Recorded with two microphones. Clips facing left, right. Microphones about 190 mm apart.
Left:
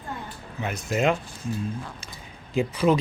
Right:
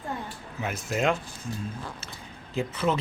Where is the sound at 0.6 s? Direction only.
Centre (ahead or behind).